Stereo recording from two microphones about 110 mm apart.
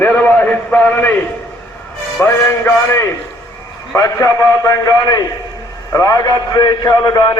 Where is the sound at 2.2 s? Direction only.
20° left (ahead or behind).